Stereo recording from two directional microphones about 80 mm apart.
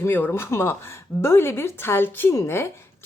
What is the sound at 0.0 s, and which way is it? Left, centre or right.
A woman's voice, left.